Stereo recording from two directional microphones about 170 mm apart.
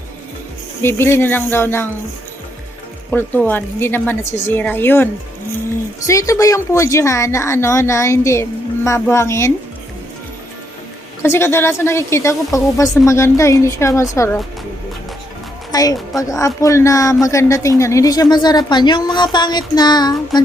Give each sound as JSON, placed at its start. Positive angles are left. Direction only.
{"t": 0.8, "sound": "a woman's voice", "side_deg": 15}
{"t": 3.1, "sound": "a woman's voice", "side_deg": 10}
{"t": 6.1, "sound": "a woman's voice", "side_deg": 20}
{"t": 11.2, "sound": "a woman's voice", "side_deg": 15}
{"t": 15.7, "sound": "a woman's voice", "side_deg": 20}